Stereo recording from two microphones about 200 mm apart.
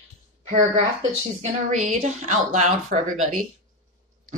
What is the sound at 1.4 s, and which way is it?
Speech, 35° right (ahead or behind).